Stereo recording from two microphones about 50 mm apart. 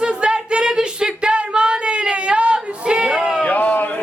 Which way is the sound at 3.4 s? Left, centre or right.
Left.